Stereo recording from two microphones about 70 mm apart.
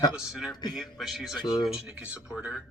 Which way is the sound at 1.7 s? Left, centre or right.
Centre.